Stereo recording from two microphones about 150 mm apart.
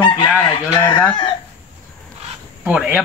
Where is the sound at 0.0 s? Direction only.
30° left (ahead or behind).